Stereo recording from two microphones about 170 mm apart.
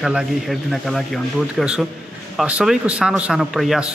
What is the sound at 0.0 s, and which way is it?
Speech, 5° right (ahead or behind).